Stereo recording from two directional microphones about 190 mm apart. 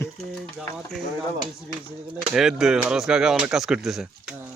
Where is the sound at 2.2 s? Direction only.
5° right (ahead or behind).